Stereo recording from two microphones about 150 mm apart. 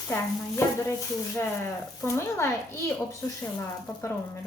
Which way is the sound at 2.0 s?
20° left (ahead or behind).